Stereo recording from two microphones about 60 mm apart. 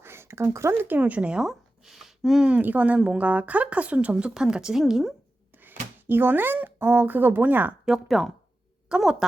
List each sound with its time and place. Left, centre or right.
0.0 s a sound: right
0.7 s speech: right
1.4 s a sound: centre
2.6 s a woman's voice: right; by 5.1 s centre
5.5 s speech: right
7.9 s a woman's voice: centre